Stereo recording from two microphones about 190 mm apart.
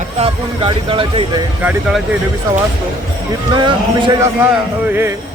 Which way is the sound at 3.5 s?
25° right (ahead or behind).